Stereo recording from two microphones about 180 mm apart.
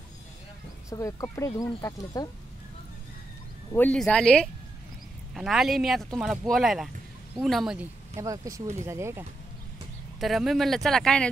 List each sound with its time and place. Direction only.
0.8 s speech: 15° left (ahead or behind)
3.7 s speech: 10° left (ahead or behind)
8.2 s speech: 15° right (ahead or behind)
10.2 s speech: centre (ahead or behind)